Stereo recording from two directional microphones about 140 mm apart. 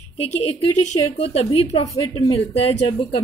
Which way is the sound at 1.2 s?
45° left (ahead or behind).